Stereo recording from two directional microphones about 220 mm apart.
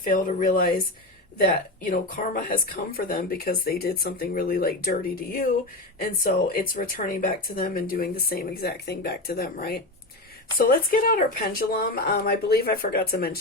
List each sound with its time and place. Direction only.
0.0 s speech: 40° left (ahead or behind)
1.8 s speech: 40° left (ahead or behind)